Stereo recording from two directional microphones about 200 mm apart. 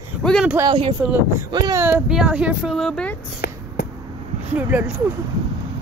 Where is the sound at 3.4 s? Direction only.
55° left (ahead or behind).